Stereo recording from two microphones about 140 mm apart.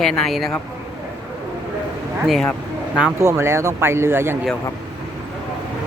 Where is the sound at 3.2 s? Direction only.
20° right (ahead or behind).